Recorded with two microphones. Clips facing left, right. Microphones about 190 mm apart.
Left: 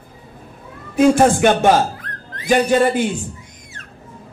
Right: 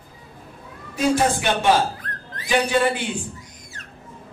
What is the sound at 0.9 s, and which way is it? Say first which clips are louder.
A man's voice: left 7 dB; 50° left (ahead or behind).